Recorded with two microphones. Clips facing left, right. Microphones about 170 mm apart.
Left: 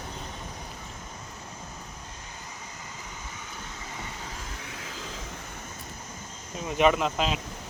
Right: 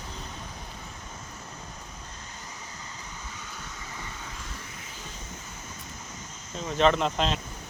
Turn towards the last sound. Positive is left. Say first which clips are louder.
# even
turn(degrees=5)  # may be behind; listen again after turning